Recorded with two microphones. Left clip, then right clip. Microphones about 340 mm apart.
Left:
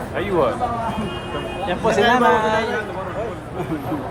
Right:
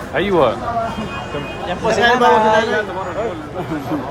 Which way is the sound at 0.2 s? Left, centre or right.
Right.